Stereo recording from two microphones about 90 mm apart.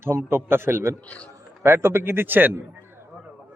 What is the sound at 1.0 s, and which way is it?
Speech, 15° left (ahead or behind).